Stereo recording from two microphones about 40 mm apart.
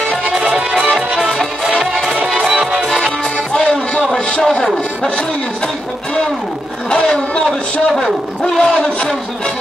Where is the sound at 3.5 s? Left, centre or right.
Left.